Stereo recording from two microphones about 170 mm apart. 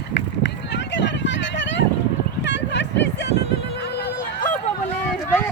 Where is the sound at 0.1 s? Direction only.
90° left; by 4.4 s 70° left (ahead or behind).